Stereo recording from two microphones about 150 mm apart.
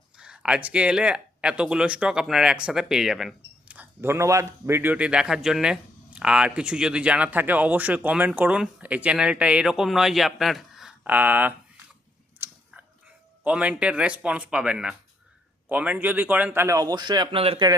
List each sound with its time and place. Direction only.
0.2 s speech: 5° right (ahead or behind)
12.4 s a sound: 15° right (ahead or behind)
13.4 s speech: 10° right (ahead or behind); by 17.7 s 40° right (ahead or behind)